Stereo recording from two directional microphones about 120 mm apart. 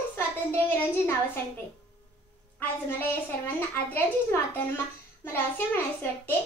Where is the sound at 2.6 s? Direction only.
15° left (ahead or behind).